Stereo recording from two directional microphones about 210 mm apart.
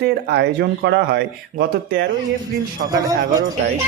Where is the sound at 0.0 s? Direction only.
55° right (ahead or behind).